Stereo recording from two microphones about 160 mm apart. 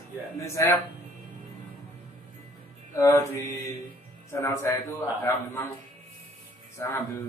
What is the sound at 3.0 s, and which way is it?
A man's voice, 20° left (ahead or behind).